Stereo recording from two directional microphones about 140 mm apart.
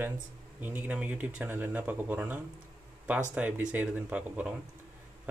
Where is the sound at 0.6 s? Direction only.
10° right (ahead or behind).